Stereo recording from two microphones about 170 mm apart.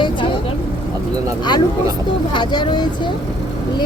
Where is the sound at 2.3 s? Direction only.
25° left (ahead or behind).